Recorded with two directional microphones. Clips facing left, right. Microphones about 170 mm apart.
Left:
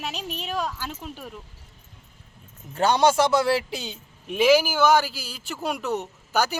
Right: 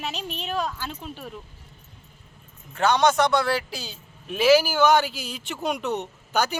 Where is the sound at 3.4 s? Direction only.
25° left (ahead or behind).